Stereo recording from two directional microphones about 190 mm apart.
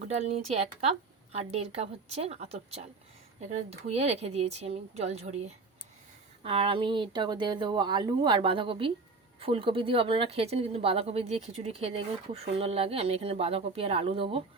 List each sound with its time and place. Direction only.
0.3 s a woman's voice: 35° right (ahead or behind)